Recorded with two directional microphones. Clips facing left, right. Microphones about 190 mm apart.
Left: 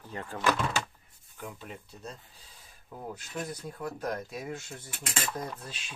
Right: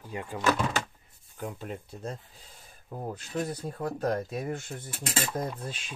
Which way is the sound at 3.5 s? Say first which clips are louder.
Right 4 dB; 55° right (ahead or behind).